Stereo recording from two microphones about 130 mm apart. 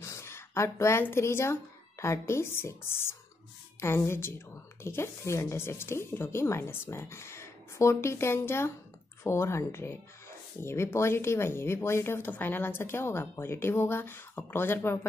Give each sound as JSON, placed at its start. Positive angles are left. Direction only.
{"t": 0.0, "sound": "speech", "side_deg": 20}